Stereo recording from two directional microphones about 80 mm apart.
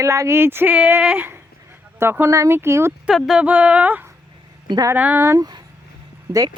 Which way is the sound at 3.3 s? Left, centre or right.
Centre.